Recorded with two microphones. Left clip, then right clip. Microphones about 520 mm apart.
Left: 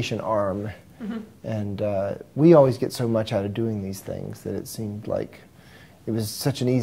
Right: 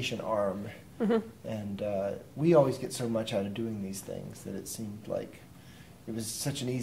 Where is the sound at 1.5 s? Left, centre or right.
Left.